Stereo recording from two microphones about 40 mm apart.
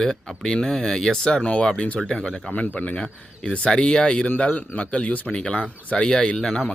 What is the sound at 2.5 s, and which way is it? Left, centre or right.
Speech, left.